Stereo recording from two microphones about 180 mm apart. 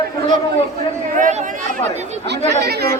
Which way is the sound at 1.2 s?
45° right (ahead or behind).